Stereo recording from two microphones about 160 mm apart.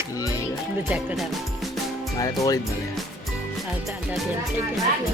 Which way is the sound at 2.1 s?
20° left (ahead or behind).